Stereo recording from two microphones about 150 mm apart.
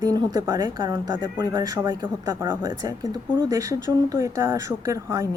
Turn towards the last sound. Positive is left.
turn(degrees=-20)  # may be behind; listen again after turning